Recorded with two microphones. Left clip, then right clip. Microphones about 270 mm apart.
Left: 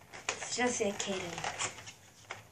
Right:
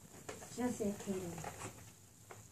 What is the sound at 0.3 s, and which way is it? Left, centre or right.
Speech, left.